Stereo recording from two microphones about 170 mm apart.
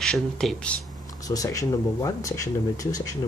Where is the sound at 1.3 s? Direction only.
20° left (ahead or behind).